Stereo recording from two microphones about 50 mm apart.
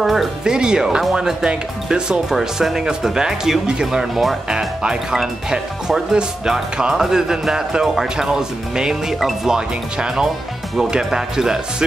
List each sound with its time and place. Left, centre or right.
0.0 s speech: centre
0.4 s speech: centre
4.5 s speech: centre